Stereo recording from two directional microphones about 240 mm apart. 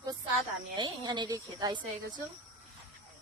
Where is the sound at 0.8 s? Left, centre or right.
Centre.